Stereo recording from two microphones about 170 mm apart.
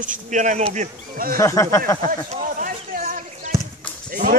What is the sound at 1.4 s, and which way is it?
Speech, 15° left (ahead or behind).